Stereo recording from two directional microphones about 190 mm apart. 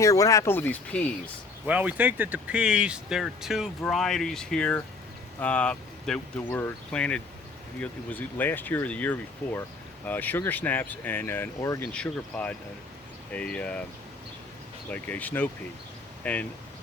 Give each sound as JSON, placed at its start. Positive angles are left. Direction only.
{"t": 0.0, "sound": "speech", "side_deg": 15}
{"t": 1.6, "sound": "speech", "side_deg": -10}
{"t": 14.8, "sound": "speech", "side_deg": 5}